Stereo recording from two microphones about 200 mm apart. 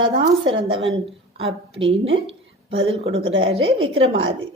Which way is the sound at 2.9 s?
30° right (ahead or behind).